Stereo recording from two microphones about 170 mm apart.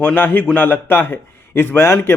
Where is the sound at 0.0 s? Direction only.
10° left (ahead or behind).